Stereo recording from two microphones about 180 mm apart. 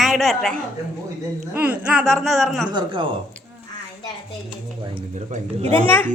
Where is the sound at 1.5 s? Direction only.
10° right (ahead or behind).